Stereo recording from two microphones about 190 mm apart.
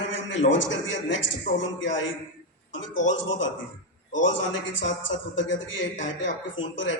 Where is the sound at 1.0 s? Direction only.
75° left (ahead or behind).